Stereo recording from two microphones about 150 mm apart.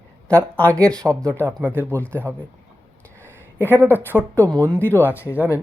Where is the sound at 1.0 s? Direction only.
20° right (ahead or behind).